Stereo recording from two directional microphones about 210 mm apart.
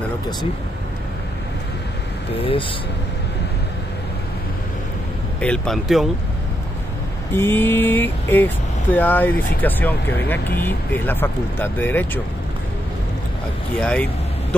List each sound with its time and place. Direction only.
2.3 s speech: 25° left (ahead or behind)
5.4 s speech: 5° left (ahead or behind)
7.3 s speech: 10° left (ahead or behind)
13.7 s speech: 5° left (ahead or behind)